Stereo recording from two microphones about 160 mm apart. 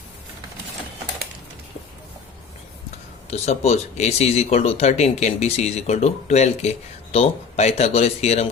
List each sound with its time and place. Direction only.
3.2 s speech: 40° left (ahead or behind)